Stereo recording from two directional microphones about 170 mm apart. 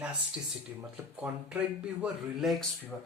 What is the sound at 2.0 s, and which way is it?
Speech, centre (ahead or behind).